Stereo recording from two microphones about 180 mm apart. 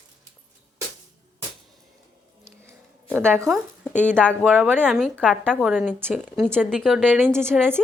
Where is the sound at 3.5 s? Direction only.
5° left (ahead or behind).